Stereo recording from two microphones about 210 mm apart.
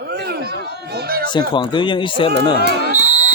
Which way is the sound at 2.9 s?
35° right (ahead or behind).